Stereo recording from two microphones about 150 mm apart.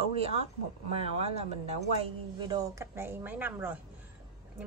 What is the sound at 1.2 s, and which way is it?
Speech, 45° right (ahead or behind).